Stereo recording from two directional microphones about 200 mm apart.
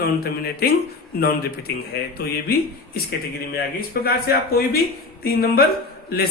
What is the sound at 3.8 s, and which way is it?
Speech, 50° left (ahead or behind).